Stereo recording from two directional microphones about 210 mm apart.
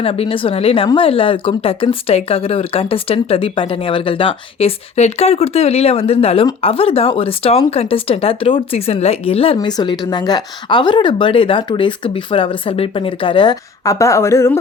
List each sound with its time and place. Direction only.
0.0 s a woman's voice: 25° left (ahead or behind)